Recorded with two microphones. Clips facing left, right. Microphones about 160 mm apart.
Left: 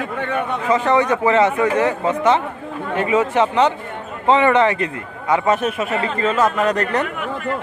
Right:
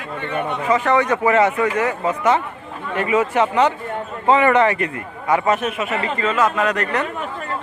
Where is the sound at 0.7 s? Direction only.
30° left (ahead or behind).